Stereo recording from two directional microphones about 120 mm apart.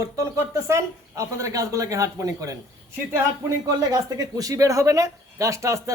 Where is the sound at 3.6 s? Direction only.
30° right (ahead or behind).